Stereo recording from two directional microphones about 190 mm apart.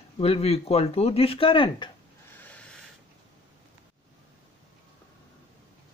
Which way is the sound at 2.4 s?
5° left (ahead or behind).